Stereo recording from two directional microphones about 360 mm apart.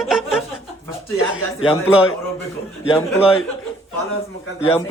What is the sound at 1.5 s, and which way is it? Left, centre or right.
Speech, centre.